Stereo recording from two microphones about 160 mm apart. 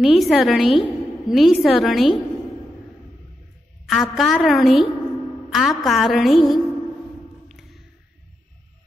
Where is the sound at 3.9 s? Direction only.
Centre (ahead or behind).